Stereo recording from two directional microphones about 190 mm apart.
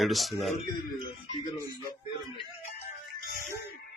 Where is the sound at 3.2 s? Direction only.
55° left (ahead or behind).